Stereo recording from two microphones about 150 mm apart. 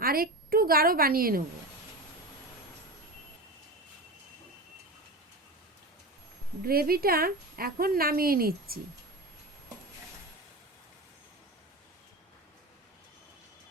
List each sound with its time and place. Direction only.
0.0 s a woman's voice: 80° right
6.7 s speech: 90° right